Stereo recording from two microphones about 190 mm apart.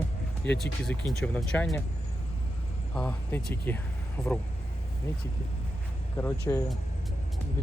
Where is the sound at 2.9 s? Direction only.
5° left (ahead or behind).